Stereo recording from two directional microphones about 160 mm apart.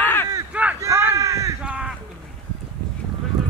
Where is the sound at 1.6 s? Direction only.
5° right (ahead or behind).